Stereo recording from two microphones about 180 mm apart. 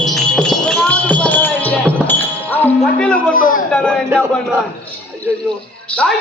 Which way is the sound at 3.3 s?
50° left (ahead or behind).